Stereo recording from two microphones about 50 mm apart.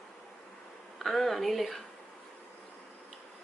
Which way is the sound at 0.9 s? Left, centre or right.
Centre.